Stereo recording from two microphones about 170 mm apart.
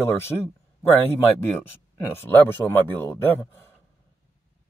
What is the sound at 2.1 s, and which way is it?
Speech, 10° left (ahead or behind).